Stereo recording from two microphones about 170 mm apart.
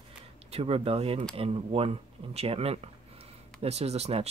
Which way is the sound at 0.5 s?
35° right (ahead or behind).